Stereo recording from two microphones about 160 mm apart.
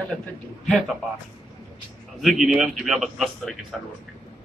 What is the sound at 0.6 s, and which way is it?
Speech, centre (ahead or behind).